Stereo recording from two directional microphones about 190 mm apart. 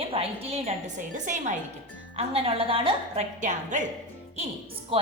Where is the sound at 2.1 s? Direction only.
30° right (ahead or behind).